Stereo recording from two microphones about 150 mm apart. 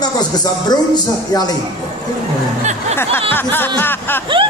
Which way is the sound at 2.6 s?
50° right (ahead or behind).